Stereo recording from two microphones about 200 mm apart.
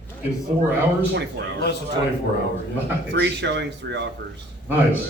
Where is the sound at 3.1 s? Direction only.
60° right (ahead or behind).